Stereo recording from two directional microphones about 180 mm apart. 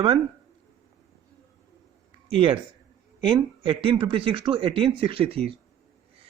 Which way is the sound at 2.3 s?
30° right (ahead or behind).